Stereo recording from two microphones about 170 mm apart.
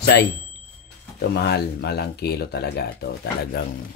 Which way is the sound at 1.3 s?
70° left (ahead or behind).